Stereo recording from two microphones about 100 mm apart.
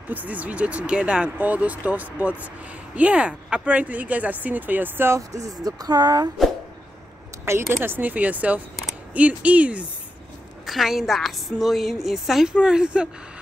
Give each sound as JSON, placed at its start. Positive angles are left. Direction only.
{"t": 0.1, "sound": "speech", "side_deg": -15}
{"t": 7.7, "sound": "speech", "side_deg": -20}
{"t": 10.7, "sound": "a woman's voice", "side_deg": 0}